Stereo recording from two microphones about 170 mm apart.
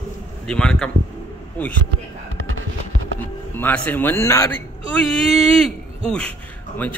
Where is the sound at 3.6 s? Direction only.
10° left (ahead or behind).